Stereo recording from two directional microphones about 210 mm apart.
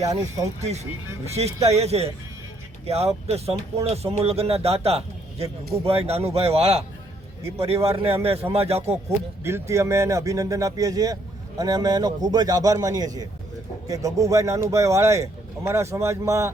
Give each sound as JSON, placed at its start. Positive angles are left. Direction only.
{"t": 0.0, "sound": "speech", "side_deg": -15}
{"t": 1.6, "sound": "a man's voice", "side_deg": -30}
{"t": 9.0, "sound": "speech", "side_deg": -10}